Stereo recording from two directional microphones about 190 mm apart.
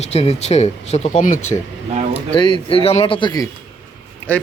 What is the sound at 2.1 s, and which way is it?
Speech, 25° left (ahead or behind).